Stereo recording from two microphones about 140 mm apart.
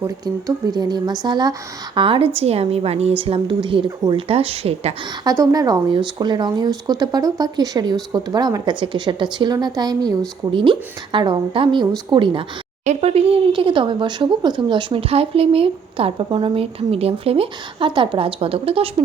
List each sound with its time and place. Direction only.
0.0 s a woman's voice: 25° right (ahead or behind)
4.3 s a woman's voice: 45° right (ahead or behind)
5.2 s speech: 25° right (ahead or behind)
12.8 s speech: 55° right (ahead or behind)